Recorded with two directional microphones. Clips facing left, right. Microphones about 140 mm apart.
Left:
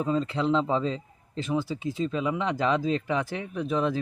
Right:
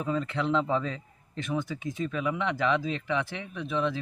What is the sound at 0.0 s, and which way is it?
A man's voice, 30° left (ahead or behind).